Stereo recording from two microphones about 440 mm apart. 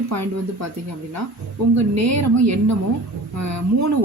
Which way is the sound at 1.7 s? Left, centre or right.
Right.